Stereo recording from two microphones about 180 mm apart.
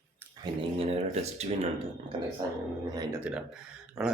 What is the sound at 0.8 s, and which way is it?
Speech, 35° right (ahead or behind).